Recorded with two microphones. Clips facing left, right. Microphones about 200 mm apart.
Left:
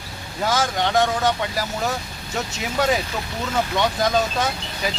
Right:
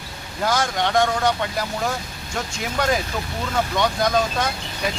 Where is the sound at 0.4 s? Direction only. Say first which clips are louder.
Even; centre (ahead or behind).